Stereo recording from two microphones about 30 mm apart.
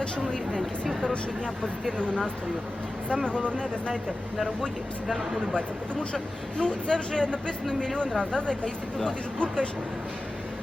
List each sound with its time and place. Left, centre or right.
3.2 s speech: left
5.0 s speech: centre
6.6 s speech: left